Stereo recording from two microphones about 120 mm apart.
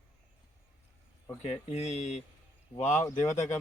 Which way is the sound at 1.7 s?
65° left (ahead or behind).